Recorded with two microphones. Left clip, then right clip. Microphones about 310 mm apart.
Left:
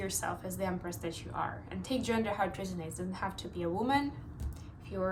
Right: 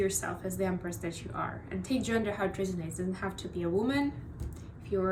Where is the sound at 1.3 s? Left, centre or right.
Left.